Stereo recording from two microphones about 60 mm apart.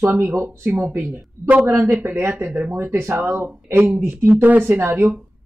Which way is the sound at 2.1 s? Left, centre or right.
Right.